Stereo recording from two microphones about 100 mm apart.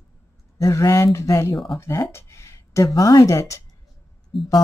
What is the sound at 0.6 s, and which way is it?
Speech, 35° left (ahead or behind).